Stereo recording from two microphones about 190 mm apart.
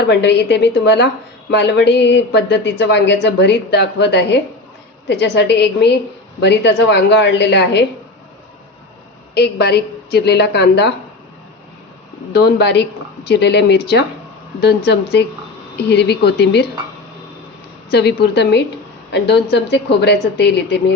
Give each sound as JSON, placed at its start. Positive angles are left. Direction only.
{"t": 0.1, "sound": "speech", "side_deg": 65}
{"t": 9.3, "sound": "speech", "side_deg": 60}
{"t": 12.3, "sound": "speech", "side_deg": 60}
{"t": 17.9, "sound": "speech", "side_deg": 60}